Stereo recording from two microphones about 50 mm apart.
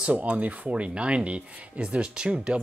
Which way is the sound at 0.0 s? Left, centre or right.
Right.